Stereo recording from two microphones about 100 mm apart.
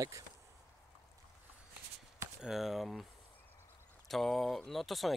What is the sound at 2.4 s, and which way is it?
Speech, 5° right (ahead or behind).